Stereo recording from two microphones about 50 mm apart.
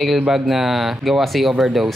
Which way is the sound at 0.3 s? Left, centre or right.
Centre.